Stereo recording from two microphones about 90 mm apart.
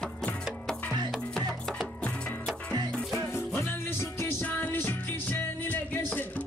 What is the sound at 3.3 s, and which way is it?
Music, 25° left (ahead or behind).